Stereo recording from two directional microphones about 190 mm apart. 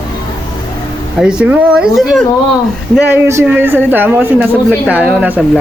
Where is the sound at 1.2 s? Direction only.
5° right (ahead or behind).